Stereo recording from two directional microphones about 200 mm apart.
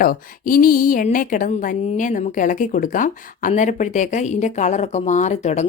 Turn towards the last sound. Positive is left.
turn(degrees=35)  # may be behind; listen again after turning